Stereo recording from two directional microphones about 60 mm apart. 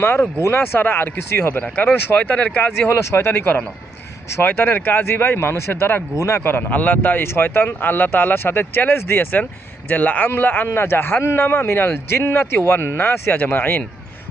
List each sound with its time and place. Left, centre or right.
0.0 s speech: left
2.9 s speech: left
6.1 s a man's voice: left
6.4 s a man's voice: left